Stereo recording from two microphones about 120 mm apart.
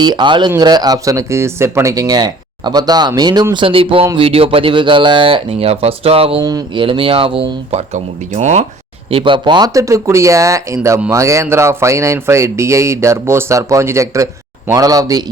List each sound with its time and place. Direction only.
0.0 s speech: 40° right (ahead or behind)
3.5 s speech: 45° right (ahead or behind); by 8.6 s 75° right (ahead or behind)
9.0 s speech: 45° right (ahead or behind); by 15.2 s 30° right (ahead or behind)